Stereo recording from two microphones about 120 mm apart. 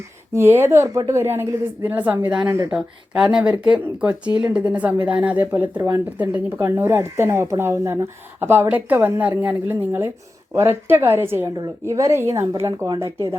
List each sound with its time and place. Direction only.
0.3 s a woman's voice: 20° right (ahead or behind)
2.6 s speech: 5° right (ahead or behind)
3.4 s speech: 35° right (ahead or behind)
3.7 s a woman's voice: 10° right (ahead or behind)